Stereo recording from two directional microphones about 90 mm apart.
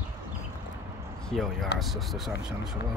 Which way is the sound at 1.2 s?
Centre (ahead or behind).